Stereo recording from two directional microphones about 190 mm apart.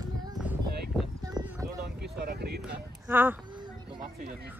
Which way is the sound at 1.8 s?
55° right (ahead or behind).